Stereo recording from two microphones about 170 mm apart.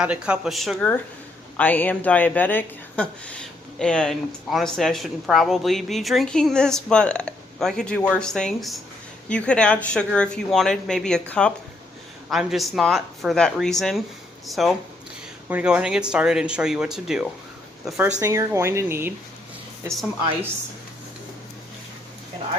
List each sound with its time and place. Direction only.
0.0 s speech: 5° right (ahead or behind)